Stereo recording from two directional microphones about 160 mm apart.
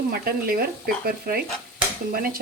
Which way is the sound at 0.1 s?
70° right (ahead or behind).